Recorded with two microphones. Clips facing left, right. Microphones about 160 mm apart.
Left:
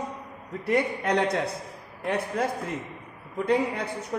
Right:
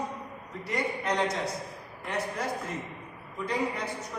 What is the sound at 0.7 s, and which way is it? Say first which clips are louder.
A man's voice: left 6 dB; 60° left (ahead or behind).